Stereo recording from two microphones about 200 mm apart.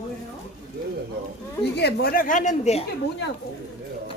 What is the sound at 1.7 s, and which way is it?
A woman's voice, 50° left (ahead or behind).